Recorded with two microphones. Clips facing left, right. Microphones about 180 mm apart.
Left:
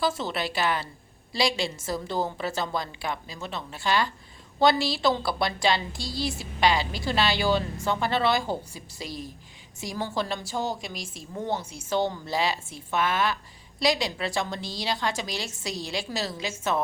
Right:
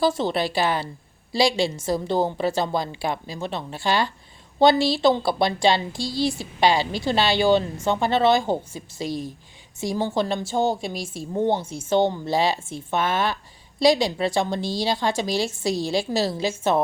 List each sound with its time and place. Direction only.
0.0 s a woman's voice: 30° right (ahead or behind)
6.0 s speech: centre (ahead or behind)
6.6 s a woman's voice: 30° right (ahead or behind)
9.0 s speech: centre (ahead or behind)
9.8 s a woman's voice: 25° right (ahead or behind)